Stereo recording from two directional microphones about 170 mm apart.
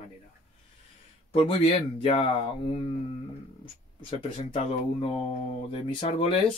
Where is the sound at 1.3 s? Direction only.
30° left (ahead or behind).